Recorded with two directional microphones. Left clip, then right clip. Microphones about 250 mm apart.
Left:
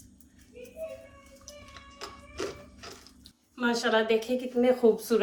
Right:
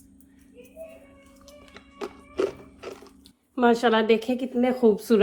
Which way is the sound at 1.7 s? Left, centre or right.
Right.